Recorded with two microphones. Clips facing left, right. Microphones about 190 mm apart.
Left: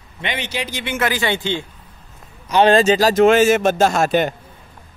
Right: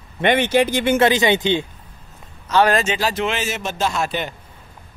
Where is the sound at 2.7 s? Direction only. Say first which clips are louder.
Left 8 dB; 40° left (ahead or behind).